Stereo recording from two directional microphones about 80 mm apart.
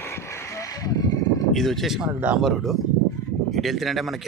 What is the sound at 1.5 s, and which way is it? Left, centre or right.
Speech, centre.